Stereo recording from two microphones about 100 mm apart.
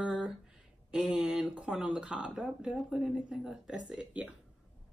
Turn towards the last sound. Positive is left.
turn(degrees=-10)  # may be behind; listen again after turning